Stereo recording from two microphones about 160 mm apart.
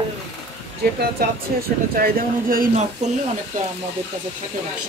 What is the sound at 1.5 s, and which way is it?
Speech, 65° right (ahead or behind).